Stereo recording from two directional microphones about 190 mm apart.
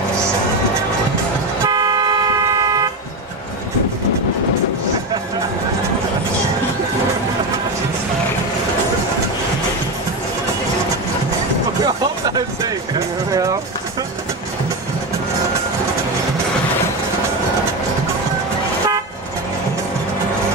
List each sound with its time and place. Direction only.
1.7 s toot: 20° right (ahead or behind)
2.6 s vehicle: 20° right (ahead or behind)
11.8 s music: 20° right (ahead or behind)
13.3 s vehicle: 20° right (ahead or behind)